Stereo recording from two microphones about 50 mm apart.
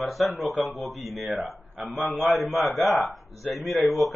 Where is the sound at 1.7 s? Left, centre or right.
Right.